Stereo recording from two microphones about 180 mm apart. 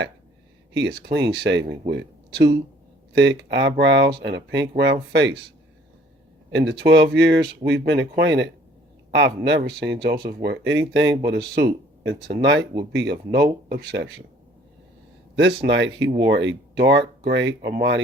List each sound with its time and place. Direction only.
0.7 s speech: 75° right (ahead or behind)
3.1 s speech: 75° right (ahead or behind)
6.5 s speech: 75° right (ahead or behind)
11.3 s speech: 65° right (ahead or behind)
12.4 s speech: 85° right
12.9 s speech: 70° right (ahead or behind)
15.4 s speech: 85° right